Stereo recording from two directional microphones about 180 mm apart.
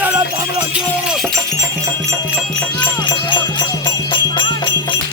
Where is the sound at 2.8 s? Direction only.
25° left (ahead or behind).